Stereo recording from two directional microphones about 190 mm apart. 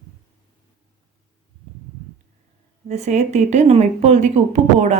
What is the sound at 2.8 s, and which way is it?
Speech, 35° right (ahead or behind).